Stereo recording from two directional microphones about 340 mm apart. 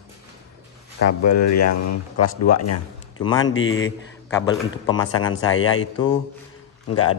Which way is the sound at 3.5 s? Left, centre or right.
Left.